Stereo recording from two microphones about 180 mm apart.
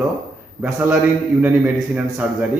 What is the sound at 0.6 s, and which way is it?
A man's voice, 10° right (ahead or behind).